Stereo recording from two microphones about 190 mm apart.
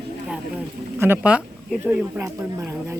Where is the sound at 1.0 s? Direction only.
10° right (ahead or behind).